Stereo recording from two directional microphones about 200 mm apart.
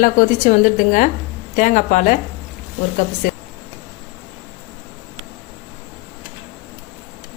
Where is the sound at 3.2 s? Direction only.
40° left (ahead or behind).